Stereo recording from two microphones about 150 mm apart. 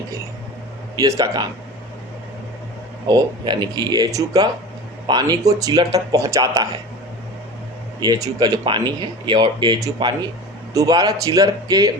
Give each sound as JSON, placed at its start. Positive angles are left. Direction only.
{"t": 0.9, "sound": "speech", "side_deg": -20}
{"t": 3.1, "sound": "speech", "side_deg": -30}
{"t": 8.0, "sound": "speech", "side_deg": -25}